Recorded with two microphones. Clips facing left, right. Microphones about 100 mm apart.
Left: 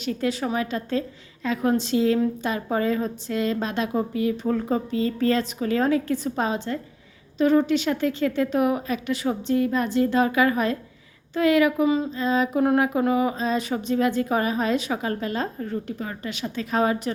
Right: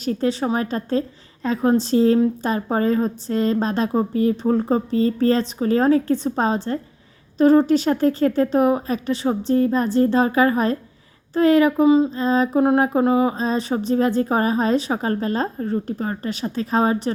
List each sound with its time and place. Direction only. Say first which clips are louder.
0.0 s a woman's voice: right 4 dB; 35° right (ahead or behind)